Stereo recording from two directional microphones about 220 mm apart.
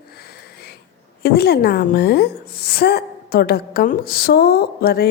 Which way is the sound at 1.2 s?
45° left (ahead or behind).